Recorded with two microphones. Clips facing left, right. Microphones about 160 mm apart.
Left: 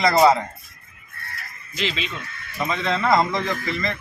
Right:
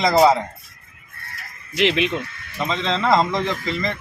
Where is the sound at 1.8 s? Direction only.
70° right (ahead or behind).